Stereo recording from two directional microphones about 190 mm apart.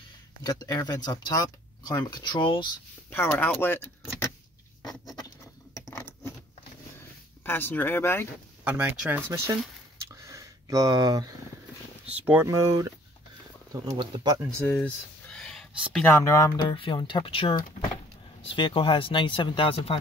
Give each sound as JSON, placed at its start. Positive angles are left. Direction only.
{"t": 0.5, "sound": "speech", "side_deg": 20}
{"t": 3.1, "sound": "speech", "side_deg": 10}
{"t": 5.8, "sound": "a sound", "side_deg": 15}
{"t": 7.4, "sound": "speech", "side_deg": 10}
{"t": 8.6, "sound": "speech", "side_deg": -10}
{"t": 10.1, "sound": "a sound", "side_deg": -15}
{"t": 12.3, "sound": "speech", "side_deg": -15}
{"t": 13.8, "sound": "speech", "side_deg": -20}
{"t": 14.7, "sound": "a sound", "side_deg": 0}
{"t": 16.1, "sound": "speech", "side_deg": 15}